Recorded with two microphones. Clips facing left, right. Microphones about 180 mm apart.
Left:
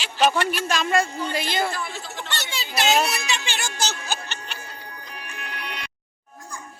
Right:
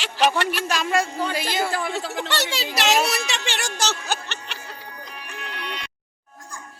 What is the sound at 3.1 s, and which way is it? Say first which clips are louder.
Music: right 2 dB; 75° right (ahead or behind).